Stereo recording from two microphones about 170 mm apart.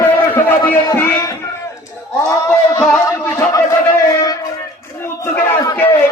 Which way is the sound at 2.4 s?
20° left (ahead or behind).